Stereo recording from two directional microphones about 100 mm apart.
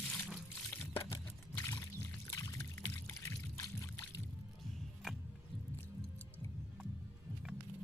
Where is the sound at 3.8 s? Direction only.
30° left (ahead or behind).